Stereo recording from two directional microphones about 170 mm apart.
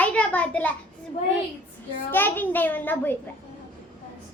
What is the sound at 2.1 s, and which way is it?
A child's voice, 10° left (ahead or behind).